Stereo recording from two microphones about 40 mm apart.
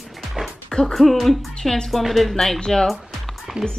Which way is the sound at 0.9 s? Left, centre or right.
Centre.